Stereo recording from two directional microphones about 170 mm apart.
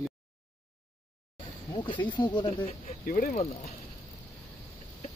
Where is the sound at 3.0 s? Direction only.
55° left (ahead or behind).